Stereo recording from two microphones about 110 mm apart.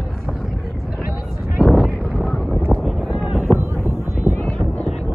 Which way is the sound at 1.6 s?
5° right (ahead or behind).